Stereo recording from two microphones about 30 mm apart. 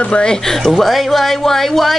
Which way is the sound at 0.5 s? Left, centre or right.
Centre.